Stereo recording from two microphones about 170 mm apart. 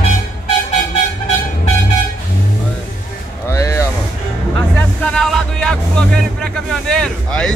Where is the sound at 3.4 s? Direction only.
15° left (ahead or behind).